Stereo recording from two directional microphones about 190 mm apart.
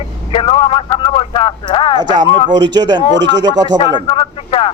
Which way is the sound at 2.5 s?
70° right (ahead or behind).